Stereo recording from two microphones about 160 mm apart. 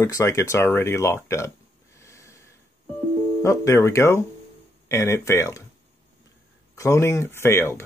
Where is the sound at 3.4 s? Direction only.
20° left (ahead or behind).